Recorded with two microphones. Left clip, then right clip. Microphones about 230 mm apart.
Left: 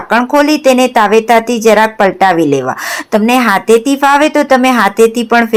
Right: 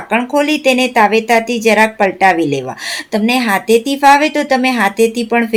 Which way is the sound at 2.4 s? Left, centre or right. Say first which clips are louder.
Left 6 dB; centre.